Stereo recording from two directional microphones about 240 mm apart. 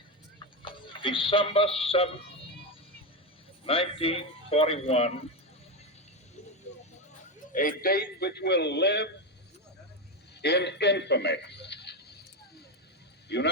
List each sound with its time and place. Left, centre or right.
0.6 s speech: left
3.7 s a man's voice: left
7.5 s a man's voice: left
10.4 s a man's voice: left
13.2 s speech: left